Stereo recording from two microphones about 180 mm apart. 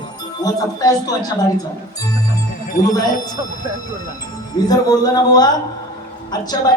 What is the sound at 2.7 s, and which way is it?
Speech, 50° left (ahead or behind).